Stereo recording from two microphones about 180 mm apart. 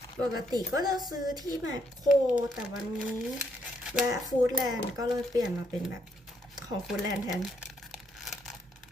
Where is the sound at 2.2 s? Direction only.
5° right (ahead or behind).